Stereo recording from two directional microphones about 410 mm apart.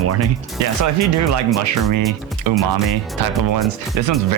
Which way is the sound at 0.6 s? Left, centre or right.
Right.